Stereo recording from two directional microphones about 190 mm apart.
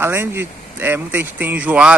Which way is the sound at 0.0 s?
10° right (ahead or behind).